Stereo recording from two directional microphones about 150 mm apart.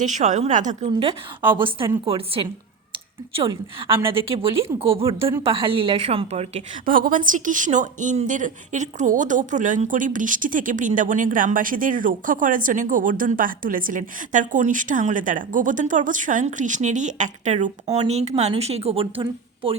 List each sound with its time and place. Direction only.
0.0 s a woman's voice: 55° right (ahead or behind)
0.9 s a woman's voice: 35° right (ahead or behind)
6.8 s a woman's voice: 70° right (ahead or behind); by 19.2 s 40° right (ahead or behind)